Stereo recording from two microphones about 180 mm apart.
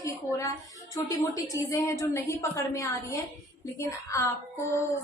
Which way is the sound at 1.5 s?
15° left (ahead or behind).